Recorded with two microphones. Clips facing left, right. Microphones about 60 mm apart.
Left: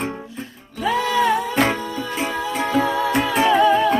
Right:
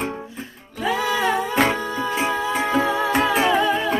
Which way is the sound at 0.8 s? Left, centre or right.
Centre.